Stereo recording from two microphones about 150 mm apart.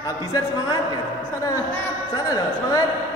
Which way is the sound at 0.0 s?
25° left (ahead or behind).